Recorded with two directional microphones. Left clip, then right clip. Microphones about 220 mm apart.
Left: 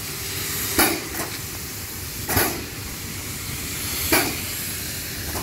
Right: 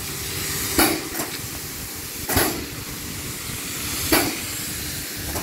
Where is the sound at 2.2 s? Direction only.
Centre (ahead or behind).